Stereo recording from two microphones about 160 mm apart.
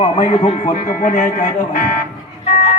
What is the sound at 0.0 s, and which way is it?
Music, 35° left (ahead or behind).